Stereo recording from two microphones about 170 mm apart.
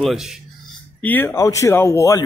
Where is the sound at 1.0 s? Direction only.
10° left (ahead or behind).